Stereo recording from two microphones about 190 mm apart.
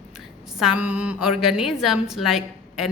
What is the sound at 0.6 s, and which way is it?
A woman's voice, 5° right (ahead or behind).